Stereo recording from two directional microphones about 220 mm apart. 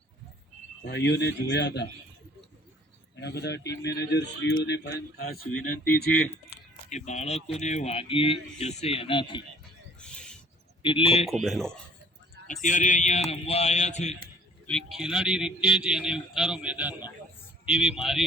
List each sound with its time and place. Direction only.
0.9 s a man's voice: 50° left (ahead or behind)
3.2 s a man's voice: 50° left (ahead or behind)
6.9 s speech: 30° left (ahead or behind)
10.0 s owl: 5° left (ahead or behind)
10.8 s speech: 25° left (ahead or behind)
11.3 s a man's voice: centre (ahead or behind)
12.6 s speech: 35° left (ahead or behind)
14.7 s a man's voice: centre (ahead or behind)